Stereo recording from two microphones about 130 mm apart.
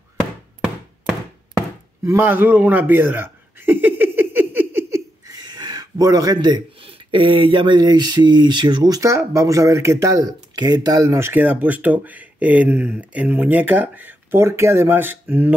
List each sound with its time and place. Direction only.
2.0 s chuckle: 15° right (ahead or behind)
6.8 s speech: 45° right (ahead or behind); by 15.5 s 15° right (ahead or behind)